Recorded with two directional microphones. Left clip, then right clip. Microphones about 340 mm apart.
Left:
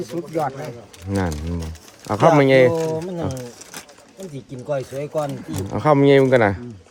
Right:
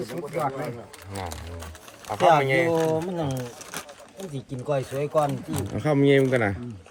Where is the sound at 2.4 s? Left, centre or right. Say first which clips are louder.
Left 9 dB; left.